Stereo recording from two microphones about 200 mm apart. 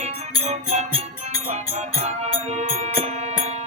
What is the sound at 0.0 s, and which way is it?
Music, 30° right (ahead or behind).